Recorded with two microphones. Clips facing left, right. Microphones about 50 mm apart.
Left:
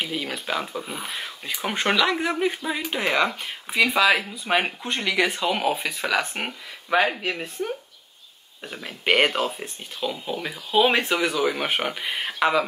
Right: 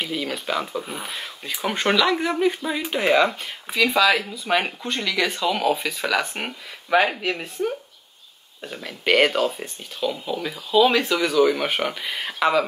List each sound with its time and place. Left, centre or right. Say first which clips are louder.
0.0 s speech: right 2 dB; centre
3.7 s speech: right 1 dB; centre
9.0 s speech: right 2 dB; centre
9.6 s speech: right 3 dB; centre
10.2 s speech: right 2 dB; centre
10.7 s speech: right 2 dB; left
11.2 s speech: right 4 dB; centre